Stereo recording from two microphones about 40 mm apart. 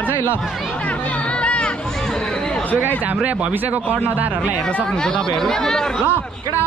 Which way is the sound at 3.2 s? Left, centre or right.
Right.